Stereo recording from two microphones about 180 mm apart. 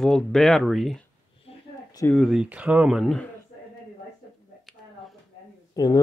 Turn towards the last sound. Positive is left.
turn(degrees=20)  # may be behind; listen again after turning